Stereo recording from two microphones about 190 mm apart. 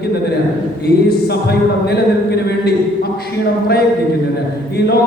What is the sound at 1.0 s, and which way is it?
A man's voice, 55° left (ahead or behind).